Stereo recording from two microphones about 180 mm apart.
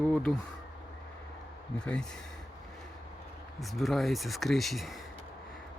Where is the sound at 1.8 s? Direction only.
5° left (ahead or behind).